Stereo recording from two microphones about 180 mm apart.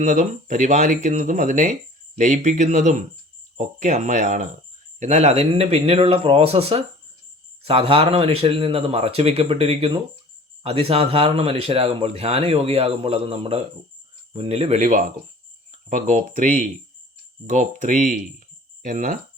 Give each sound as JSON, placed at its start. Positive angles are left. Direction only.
{"t": 0.0, "sound": "speech", "side_deg": -45}